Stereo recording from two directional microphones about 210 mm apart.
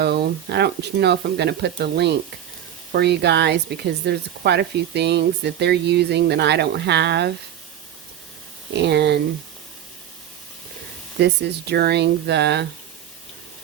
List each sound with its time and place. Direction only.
0.0 s speech: 50° right (ahead or behind)
8.7 s speech: 55° right (ahead or behind)
11.2 s speech: 50° right (ahead or behind)